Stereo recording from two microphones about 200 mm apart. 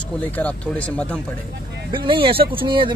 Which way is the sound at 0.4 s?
5° left (ahead or behind).